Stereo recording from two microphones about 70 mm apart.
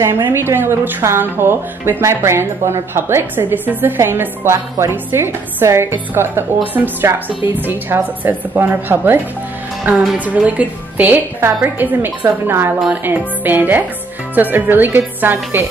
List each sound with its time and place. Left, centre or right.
0.2 s a woman's voice: right